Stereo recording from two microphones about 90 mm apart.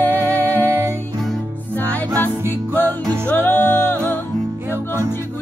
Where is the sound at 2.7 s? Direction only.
20° left (ahead or behind).